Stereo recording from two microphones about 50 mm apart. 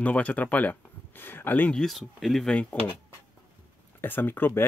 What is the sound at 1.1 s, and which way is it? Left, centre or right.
Speech, left.